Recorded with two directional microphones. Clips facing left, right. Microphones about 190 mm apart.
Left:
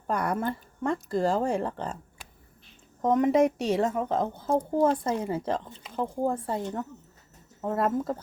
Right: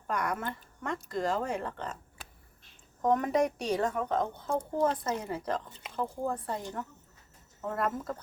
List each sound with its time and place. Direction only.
0.1 s speech: 30° left (ahead or behind)
3.0 s a woman's voice: 20° left (ahead or behind)